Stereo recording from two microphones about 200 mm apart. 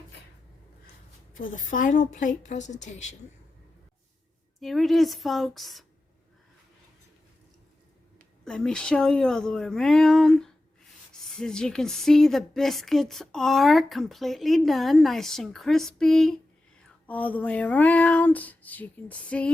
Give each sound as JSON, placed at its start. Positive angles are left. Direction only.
{"t": 1.4, "sound": "a woman's voice", "side_deg": 40}
{"t": 4.6, "sound": "speech", "side_deg": 0}
{"t": 8.4, "sound": "speech", "side_deg": 5}
{"t": 17.1, "sound": "a sound", "side_deg": 10}